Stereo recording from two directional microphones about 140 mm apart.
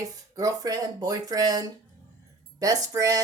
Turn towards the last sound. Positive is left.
turn(degrees=-25)  # may be behind; listen again after turning